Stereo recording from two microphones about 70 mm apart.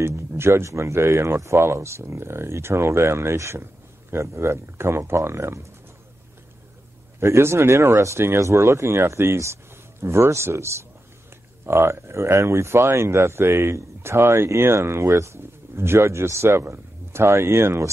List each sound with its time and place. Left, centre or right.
0.0 s speech: right
7.2 s speech: right